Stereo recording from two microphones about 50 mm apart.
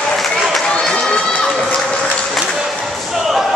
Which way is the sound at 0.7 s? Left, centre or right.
Centre.